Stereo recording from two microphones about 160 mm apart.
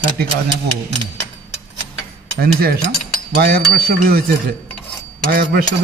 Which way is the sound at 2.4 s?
70° right (ahead or behind).